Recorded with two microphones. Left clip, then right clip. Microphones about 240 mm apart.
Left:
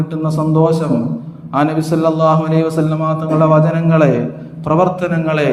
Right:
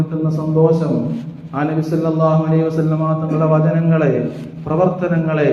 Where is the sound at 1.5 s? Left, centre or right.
Left.